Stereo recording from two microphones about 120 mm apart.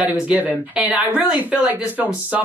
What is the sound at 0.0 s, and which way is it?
Speech, 10° right (ahead or behind).